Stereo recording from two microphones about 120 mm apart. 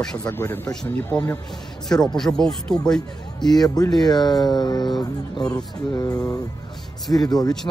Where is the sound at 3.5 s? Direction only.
30° left (ahead or behind).